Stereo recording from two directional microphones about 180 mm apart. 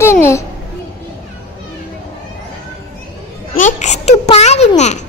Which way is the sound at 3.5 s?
40° left (ahead or behind).